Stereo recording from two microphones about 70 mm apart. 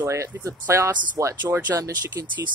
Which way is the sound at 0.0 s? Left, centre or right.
Right.